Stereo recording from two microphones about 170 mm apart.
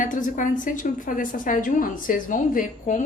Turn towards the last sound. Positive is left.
turn(degrees=50)  # may be behind; listen again after turning